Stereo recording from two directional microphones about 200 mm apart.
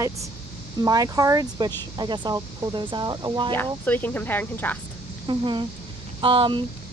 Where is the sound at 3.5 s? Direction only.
10° left (ahead or behind).